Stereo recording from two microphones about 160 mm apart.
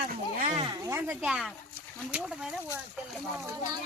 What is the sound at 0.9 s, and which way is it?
Speech, 15° right (ahead or behind).